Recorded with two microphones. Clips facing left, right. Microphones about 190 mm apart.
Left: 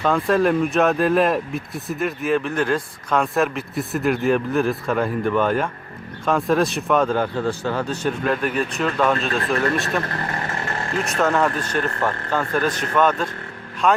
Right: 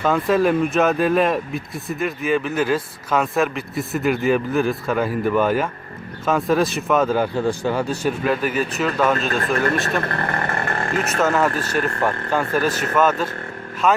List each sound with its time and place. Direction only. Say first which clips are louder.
0.0 s speech: right 1 dB; 5° right (ahead or behind)
10.1 s vehicle: right 3 dB; 60° right (ahead or behind)
11.0 s speech: even; 5° right (ahead or behind)